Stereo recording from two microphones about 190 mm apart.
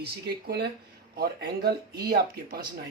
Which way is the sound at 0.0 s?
55° right (ahead or behind).